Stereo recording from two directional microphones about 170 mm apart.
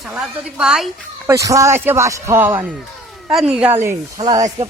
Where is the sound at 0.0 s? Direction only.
5° right (ahead or behind).